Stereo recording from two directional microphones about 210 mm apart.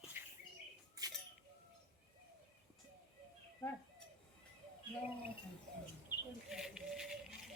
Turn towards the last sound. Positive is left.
turn(degrees=-5)  # may be behind; listen again after turning